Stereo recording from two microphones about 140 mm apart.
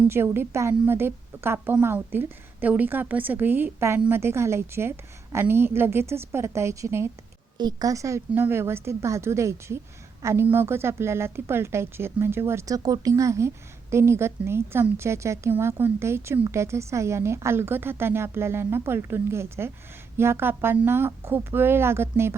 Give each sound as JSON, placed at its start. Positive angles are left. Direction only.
{"t": 0.1, "sound": "a woman's voice", "side_deg": -15}